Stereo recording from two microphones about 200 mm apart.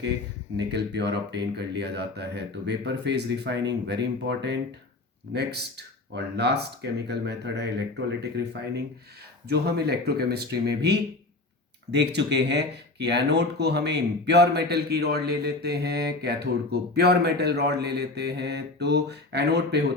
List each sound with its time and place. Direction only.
0.5 s speech: 60° right (ahead or behind)
9.5 s speech: 55° right (ahead or behind)